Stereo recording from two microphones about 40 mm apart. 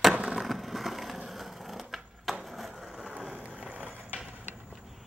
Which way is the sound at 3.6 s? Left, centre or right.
Right.